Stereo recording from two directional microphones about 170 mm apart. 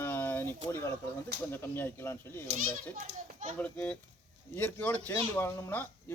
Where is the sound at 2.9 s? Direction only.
45° right (ahead or behind).